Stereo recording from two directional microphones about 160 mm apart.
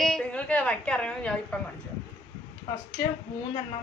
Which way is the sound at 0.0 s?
5° left (ahead or behind).